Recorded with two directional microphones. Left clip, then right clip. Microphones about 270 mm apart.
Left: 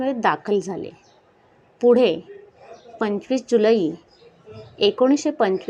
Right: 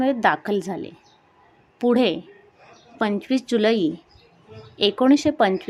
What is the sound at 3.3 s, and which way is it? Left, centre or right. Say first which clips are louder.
Speech: left 4 dB; centre.